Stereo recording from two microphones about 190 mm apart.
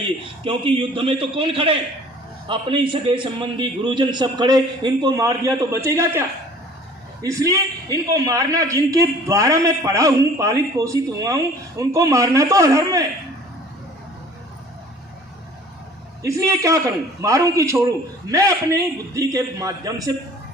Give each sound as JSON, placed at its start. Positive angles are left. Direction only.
{"t": 0.4, "sound": "a man's voice", "side_deg": -25}
{"t": 16.2, "sound": "a man's voice", "side_deg": -15}